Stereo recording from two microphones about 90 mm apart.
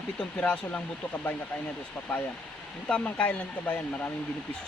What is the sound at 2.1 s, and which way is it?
Speech, 15° left (ahead or behind).